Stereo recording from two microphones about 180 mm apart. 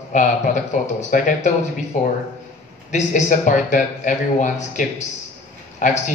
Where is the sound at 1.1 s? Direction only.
45° left (ahead or behind).